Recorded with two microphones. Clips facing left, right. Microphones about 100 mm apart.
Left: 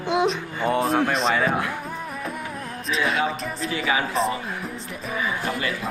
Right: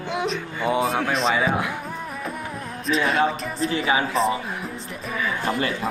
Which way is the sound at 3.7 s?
30° right (ahead or behind).